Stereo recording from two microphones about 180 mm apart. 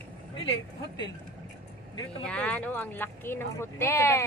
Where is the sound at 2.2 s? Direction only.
5° left (ahead or behind).